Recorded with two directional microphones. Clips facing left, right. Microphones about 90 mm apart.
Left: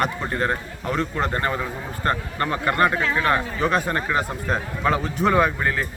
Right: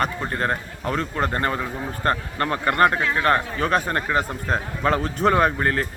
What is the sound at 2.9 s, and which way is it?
Speech, 5° right (ahead or behind).